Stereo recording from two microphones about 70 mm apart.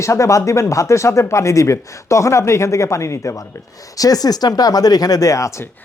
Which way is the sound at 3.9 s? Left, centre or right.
Left.